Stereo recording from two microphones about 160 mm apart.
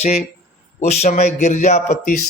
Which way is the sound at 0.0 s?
45° left (ahead or behind).